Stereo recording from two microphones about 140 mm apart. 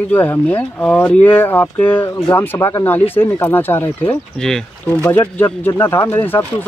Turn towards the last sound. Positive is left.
turn(degrees=15)  # may be behind; listen again after turning